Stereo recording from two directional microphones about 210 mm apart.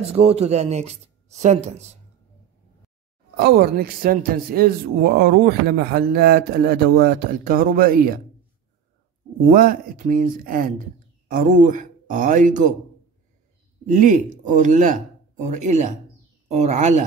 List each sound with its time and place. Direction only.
0.1 s speech: 30° right (ahead or behind)
3.3 s a man's voice: 50° right (ahead or behind)
9.5 s speech: 40° right (ahead or behind)
13.8 s speech: 35° right (ahead or behind)